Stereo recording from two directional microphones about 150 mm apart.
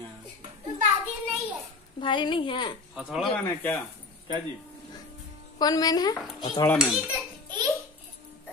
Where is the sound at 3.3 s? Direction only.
10° left (ahead or behind).